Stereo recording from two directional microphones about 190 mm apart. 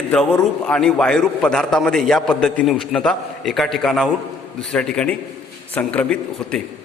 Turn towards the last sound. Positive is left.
turn(degrees=5)  # may be behind; listen again after turning